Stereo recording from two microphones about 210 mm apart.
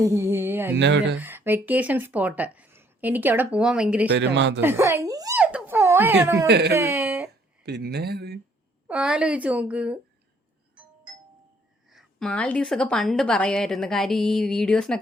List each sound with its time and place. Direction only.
0.0 s speech: 10° right (ahead or behind)
0.8 s speech: 60° right (ahead or behind)
1.2 s speech: 10° right (ahead or behind)
4.2 s speech: 55° right (ahead or behind)
4.6 s speech: 15° right (ahead or behind)
5.4 s a sound: 5° right (ahead or behind)
6.5 s speech: 50° right (ahead or behind)
6.7 s a sound: 10° right (ahead or behind)
7.6 s speech: 50° right (ahead or behind)
8.9 s a woman's voice: 5° right (ahead or behind)
11.9 s a woman's voice: centre (ahead or behind)